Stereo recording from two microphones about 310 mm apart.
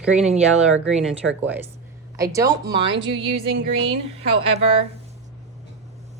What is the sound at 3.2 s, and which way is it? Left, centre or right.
Music, right.